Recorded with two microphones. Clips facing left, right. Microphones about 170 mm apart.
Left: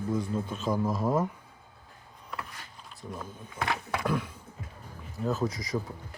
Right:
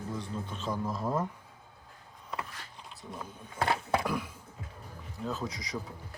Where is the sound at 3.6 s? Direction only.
30° right (ahead or behind).